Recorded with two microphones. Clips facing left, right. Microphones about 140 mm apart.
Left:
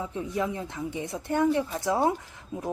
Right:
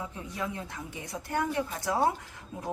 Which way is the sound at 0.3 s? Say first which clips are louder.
Left 5 dB; 20° left (ahead or behind).